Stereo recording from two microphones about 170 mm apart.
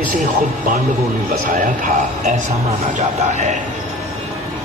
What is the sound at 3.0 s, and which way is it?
Speech, 40° right (ahead or behind).